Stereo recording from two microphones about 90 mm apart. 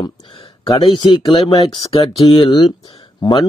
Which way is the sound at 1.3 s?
80° left.